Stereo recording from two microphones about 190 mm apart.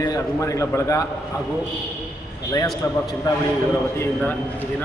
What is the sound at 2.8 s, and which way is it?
Speech, 15° left (ahead or behind).